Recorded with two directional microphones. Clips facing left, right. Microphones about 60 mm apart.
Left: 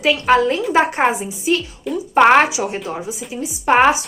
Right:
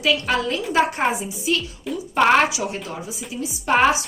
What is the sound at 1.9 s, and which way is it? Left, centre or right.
Speech, centre.